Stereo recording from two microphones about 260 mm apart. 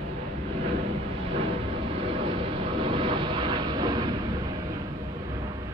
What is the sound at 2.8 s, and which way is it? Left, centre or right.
Vehicle, centre.